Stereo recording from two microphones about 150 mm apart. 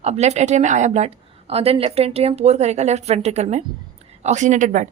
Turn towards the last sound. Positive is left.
turn(degrees=-55)  # may be behind; listen again after turning